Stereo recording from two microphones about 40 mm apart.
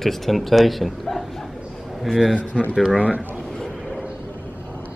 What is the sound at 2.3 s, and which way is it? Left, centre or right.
Speech, left.